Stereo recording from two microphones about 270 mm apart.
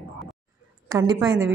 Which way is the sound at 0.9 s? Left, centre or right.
Centre.